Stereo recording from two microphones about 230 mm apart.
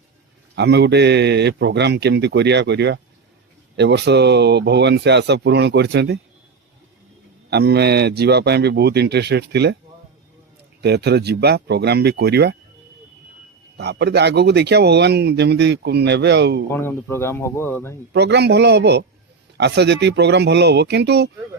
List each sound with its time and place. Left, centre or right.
0.5 s speech: right
7.5 s speech: right
10.8 s speech: right
13.7 s speech: right
16.7 s speech: centre
18.1 s speech: right